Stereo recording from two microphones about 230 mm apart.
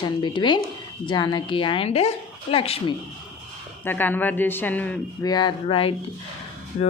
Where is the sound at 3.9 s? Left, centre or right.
Centre.